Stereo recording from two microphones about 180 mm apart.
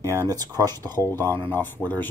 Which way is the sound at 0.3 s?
20° right (ahead or behind).